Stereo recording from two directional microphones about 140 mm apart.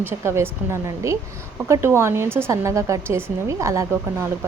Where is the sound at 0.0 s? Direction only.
15° right (ahead or behind).